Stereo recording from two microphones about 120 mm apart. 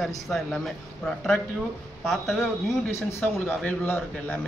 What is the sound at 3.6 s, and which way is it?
Speech, 15° left (ahead or behind).